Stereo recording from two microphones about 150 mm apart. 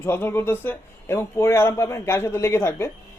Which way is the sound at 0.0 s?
15° left (ahead or behind).